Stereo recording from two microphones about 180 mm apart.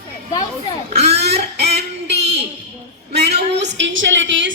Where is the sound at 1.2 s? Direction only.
65° right (ahead or behind); by 4.5 s 90° right.